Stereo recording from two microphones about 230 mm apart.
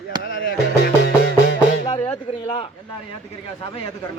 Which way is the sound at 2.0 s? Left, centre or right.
Left.